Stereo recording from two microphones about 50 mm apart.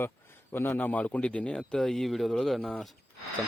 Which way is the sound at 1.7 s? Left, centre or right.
Centre.